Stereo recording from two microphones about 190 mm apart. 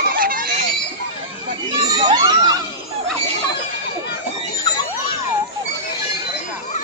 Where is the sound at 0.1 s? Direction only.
50° right (ahead or behind).